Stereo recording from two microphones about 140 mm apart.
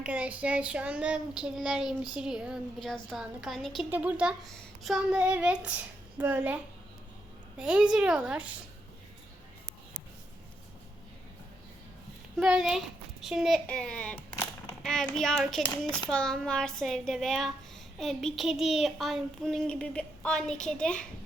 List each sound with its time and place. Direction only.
0.0 s child singing: 10° right (ahead or behind)
3.8 s a woman's voice: 10° right (ahead or behind)
7.6 s a woman's voice: 5° right (ahead or behind)
12.4 s child singing: 5° right (ahead or behind)
13.7 s a child's voice: 5° left (ahead or behind)
14.8 s child singing: 5° left (ahead or behind)